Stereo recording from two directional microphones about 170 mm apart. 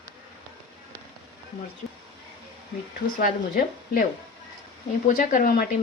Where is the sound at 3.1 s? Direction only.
55° left (ahead or behind).